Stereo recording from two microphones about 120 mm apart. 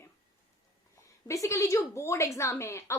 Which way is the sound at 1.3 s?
25° left (ahead or behind).